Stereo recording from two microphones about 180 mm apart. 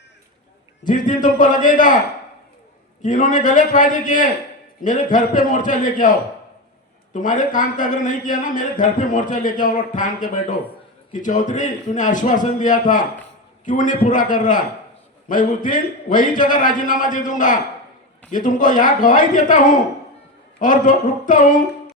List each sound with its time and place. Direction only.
0.9 s speech: 45° left (ahead or behind)
3.0 s speech: 45° left (ahead or behind)